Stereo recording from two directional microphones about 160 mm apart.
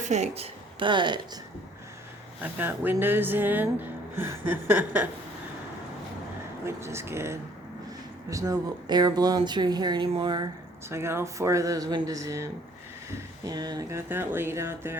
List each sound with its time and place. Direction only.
0.0 s a woman's voice: 45° right (ahead or behind); by 1.2 s 30° right (ahead or behind)
2.4 s speech: 10° right (ahead or behind)
6.7 s speech: 15° right (ahead or behind)
10.8 s speech: 15° right (ahead or behind)